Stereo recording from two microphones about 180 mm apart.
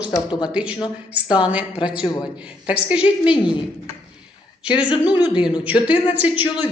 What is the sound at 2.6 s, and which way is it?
Speech, 5° right (ahead or behind).